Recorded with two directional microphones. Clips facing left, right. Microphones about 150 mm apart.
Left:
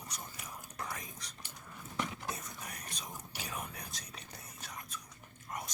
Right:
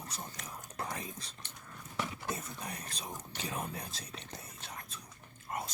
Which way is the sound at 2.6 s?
30° right (ahead or behind).